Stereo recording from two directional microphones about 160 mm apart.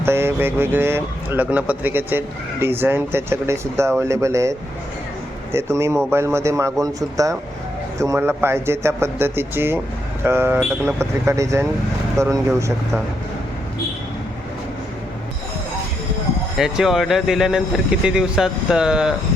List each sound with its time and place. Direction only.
0.0 s speech: 15° right (ahead or behind)
16.6 s speech: 5° right (ahead or behind)